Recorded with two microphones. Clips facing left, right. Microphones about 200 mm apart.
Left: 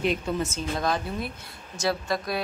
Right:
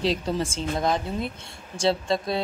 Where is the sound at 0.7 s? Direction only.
20° right (ahead or behind).